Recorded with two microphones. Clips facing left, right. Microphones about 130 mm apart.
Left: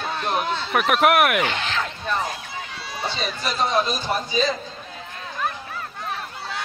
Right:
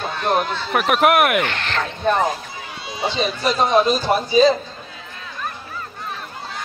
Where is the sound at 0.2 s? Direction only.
55° right (ahead or behind).